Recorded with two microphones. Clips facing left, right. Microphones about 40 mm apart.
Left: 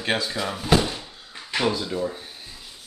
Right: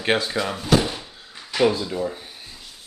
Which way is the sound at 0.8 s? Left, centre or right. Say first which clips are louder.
Right 1 dB; centre.